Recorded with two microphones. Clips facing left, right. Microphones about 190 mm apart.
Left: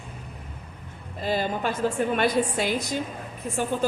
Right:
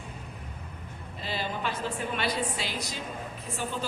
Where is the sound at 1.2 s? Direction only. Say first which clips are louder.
Left 7 dB; 45° left (ahead or behind).